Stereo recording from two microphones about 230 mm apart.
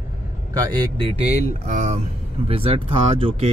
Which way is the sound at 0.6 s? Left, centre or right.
Centre.